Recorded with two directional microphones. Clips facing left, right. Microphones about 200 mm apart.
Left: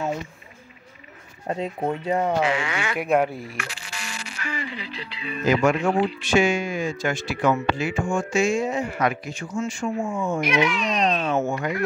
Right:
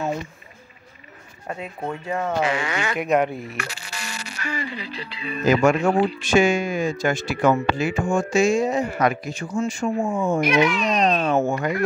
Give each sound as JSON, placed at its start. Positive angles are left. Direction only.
{"t": 1.5, "sound": "speech", "side_deg": 30}
{"t": 2.4, "sound": "speech", "side_deg": -40}
{"t": 3.0, "sound": "speech", "side_deg": 5}
{"t": 3.5, "sound": "speech", "side_deg": -40}
{"t": 9.9, "sound": "speech", "side_deg": -55}
{"t": 10.2, "sound": "speech", "side_deg": -40}